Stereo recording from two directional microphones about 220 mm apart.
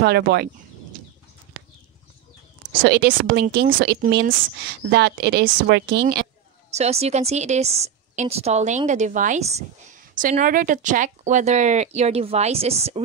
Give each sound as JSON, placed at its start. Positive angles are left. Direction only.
{"t": 0.0, "sound": "speech", "side_deg": -45}
{"t": 2.8, "sound": "speech", "side_deg": -45}
{"t": 6.7, "sound": "a woman's voice", "side_deg": -30}